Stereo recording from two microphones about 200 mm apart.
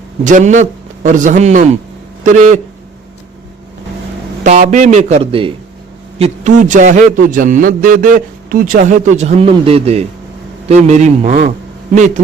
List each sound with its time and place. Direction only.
0.3 s a man's voice: 40° right (ahead or behind)
4.4 s a man's voice: 35° right (ahead or behind)